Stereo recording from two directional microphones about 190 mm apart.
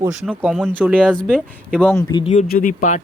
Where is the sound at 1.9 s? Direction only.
15° left (ahead or behind).